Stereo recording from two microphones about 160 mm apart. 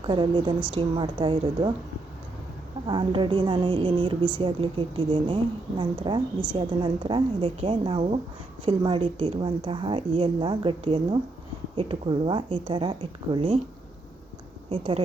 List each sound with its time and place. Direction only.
0.0 s a woman's voice: 30° right (ahead or behind)
2.8 s a woman's voice: 30° right (ahead or behind)
14.7 s a woman's voice: 35° right (ahead or behind)